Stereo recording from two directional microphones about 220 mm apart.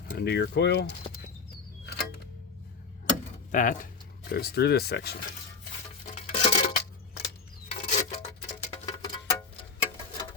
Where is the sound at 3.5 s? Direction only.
35° left (ahead or behind).